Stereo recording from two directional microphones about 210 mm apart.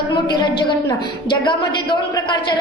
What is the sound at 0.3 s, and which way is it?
A woman's voice, 20° left (ahead or behind).